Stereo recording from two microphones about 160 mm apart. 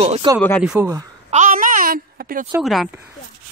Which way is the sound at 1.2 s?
50° right (ahead or behind).